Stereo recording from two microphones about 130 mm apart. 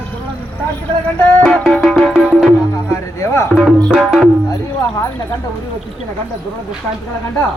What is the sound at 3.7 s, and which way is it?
Music, centre (ahead or behind).